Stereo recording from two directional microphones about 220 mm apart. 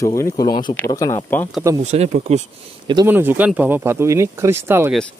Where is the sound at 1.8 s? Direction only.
30° right (ahead or behind).